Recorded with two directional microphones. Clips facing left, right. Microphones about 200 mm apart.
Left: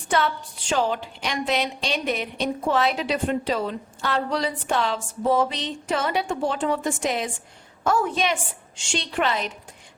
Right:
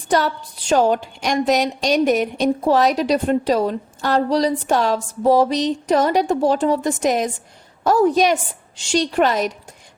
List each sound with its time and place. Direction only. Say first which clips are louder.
0.1 s a woman's voice: right 4 dB; 40° right (ahead or behind)